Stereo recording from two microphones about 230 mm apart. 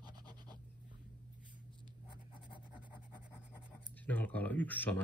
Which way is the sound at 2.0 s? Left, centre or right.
Left.